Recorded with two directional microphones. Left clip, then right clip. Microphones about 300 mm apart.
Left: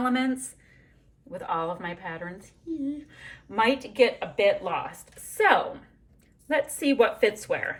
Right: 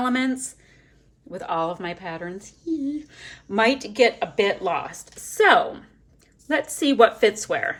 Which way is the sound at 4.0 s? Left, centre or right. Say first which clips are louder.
Right 2 dB; centre.